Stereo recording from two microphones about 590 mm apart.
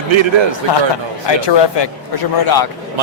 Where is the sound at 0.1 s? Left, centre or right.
Right.